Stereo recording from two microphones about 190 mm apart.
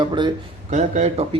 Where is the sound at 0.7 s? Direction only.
40° right (ahead or behind).